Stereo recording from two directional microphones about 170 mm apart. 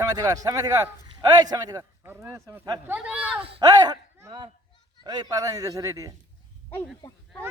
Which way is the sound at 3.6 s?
20° right (ahead or behind).